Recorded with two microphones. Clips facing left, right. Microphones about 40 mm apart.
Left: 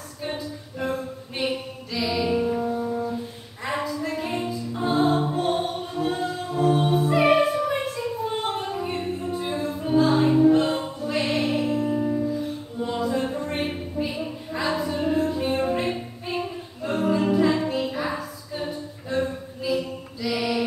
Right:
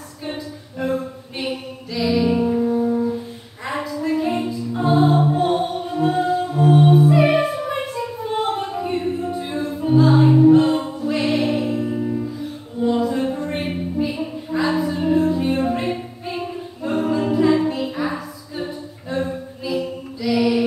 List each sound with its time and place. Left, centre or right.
0.3 s a capella: centre
1.4 s music: centre
4.0 s music: centre
7.8 s a sound: centre
9.3 s music: centre
12.9 s a sound: centre
14.7 s music: centre